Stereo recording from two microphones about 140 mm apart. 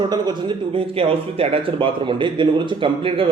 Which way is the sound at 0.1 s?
30° right (ahead or behind).